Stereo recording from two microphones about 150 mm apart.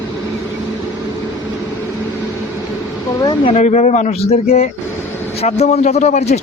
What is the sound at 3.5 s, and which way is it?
Speech, 50° left (ahead or behind).